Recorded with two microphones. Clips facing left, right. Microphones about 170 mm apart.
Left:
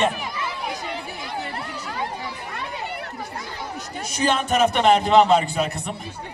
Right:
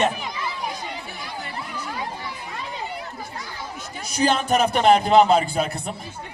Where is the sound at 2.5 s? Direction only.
65° left (ahead or behind).